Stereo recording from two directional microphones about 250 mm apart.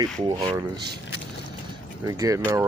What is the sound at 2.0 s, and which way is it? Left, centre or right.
Speech, centre.